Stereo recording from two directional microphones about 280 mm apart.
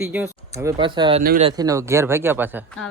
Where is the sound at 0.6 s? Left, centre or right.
Centre.